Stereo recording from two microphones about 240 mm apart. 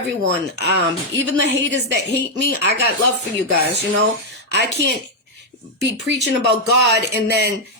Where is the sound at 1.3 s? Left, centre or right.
Right.